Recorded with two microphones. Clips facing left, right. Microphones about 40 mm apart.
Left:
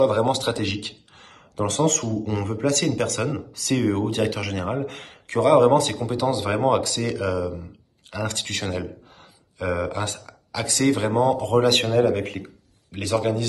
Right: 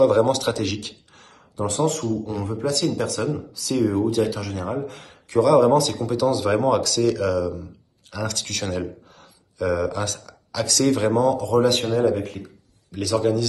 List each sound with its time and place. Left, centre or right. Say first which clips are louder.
0.2 s a man's voice: right 2 dB; left
1.6 s speech: even; left
6.0 s a man's voice: right 3 dB; left
8.1 s a man's voice: even; left
8.5 s a sound: right 1 dB; centre
9.6 s speech: right 2 dB; left
10.9 s speech: right 1 dB; centre
11.1 s a man's voice: even; left
11.4 s speech: even; left
12.9 s a man's voice: right 2 dB; left